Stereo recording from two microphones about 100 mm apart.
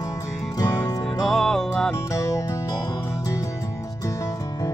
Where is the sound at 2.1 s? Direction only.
30° left (ahead or behind).